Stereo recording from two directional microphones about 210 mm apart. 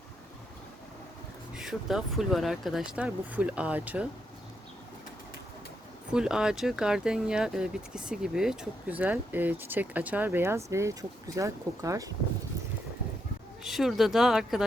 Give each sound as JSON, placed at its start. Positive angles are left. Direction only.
{"t": 1.5, "sound": "speech", "side_deg": 0}
{"t": 6.1, "sound": "speech", "side_deg": -5}
{"t": 13.7, "sound": "speech", "side_deg": 0}